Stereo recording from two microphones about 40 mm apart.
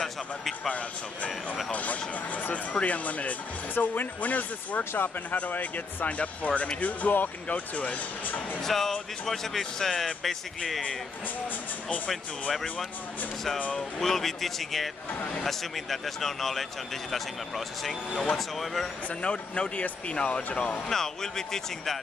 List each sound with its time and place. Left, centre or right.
0.7 s speech: left
3.7 s speech: left
8.6 s speech: centre
12.1 s a man's voice: centre
13.7 s a man's voice: centre
15.1 s speech: left
15.4 s a man's voice: centre
19.0 s speech: left
20.9 s speech: centre